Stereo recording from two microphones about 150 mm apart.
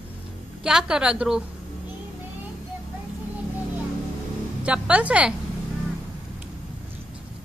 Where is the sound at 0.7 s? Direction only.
5° right (ahead or behind).